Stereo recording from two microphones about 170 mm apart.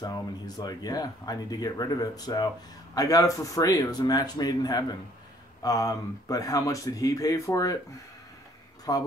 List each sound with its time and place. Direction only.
0.0 s speech: 25° left (ahead or behind)
8.9 s speech: 20° left (ahead or behind)